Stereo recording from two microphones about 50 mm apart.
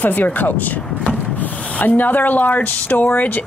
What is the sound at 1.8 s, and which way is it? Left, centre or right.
A woman's voice, left.